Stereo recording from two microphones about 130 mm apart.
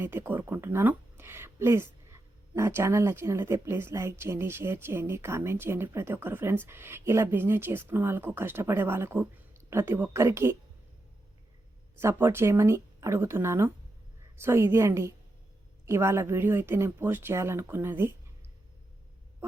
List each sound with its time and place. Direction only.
0.0 s speech: 15° right (ahead or behind)
11.9 s speech: 20° right (ahead or behind)